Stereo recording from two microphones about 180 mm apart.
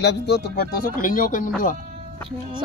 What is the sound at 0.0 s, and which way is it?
Speech, 70° left (ahead or behind).